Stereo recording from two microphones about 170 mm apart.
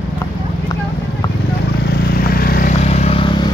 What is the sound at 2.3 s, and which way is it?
Vehicle, 60° left (ahead or behind).